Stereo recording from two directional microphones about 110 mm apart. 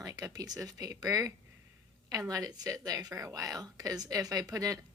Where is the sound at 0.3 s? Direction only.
35° right (ahead or behind).